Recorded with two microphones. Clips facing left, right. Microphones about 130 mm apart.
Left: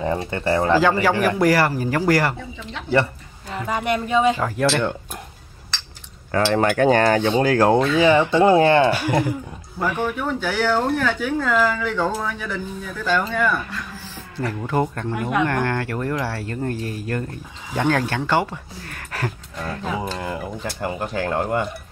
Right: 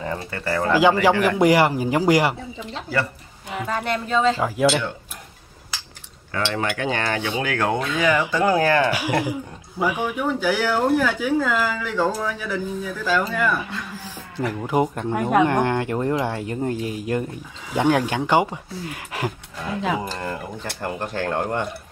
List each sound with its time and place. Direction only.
0.0 s speech: 25° left (ahead or behind)
1.4 s speech: 20° right (ahead or behind)
3.6 s speech: 10° left (ahead or behind)
4.4 s speech: 10° right (ahead or behind)
6.3 s cutlery: 45° left (ahead or behind); by 8.9 s 25° left (ahead or behind)
8.9 s speech: 10° right (ahead or behind)
14.5 s speech: 15° right (ahead or behind)
15.1 s speech: 45° right (ahead or behind)
15.4 s speech: 15° right (ahead or behind)
20.0 s speech: 5° left (ahead or behind)